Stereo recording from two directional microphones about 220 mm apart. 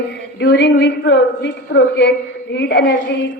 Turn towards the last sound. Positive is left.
turn(degrees=50)  # may be behind; listen again after turning